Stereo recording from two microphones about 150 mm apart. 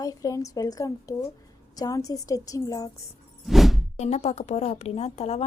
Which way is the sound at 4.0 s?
50° left (ahead or behind).